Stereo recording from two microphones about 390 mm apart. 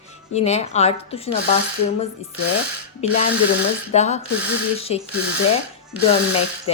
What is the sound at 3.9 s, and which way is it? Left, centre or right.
A woman's voice, centre.